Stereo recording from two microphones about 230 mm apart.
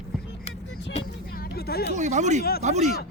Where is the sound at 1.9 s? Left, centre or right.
Right.